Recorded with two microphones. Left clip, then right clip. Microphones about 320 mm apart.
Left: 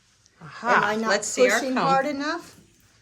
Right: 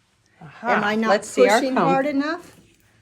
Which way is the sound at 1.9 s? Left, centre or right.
Right.